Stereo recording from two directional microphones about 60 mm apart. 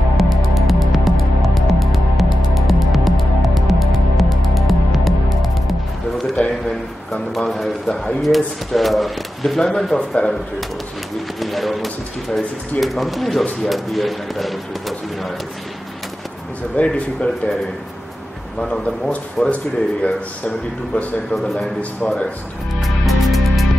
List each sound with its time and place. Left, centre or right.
0.2 s music: centre
6.4 s a sound: left
7.1 s speech: centre
9.9 s speech: centre
11.3 s speech: centre
16.7 s speech: centre
18.6 s a man's voice: centre
22.8 s music: centre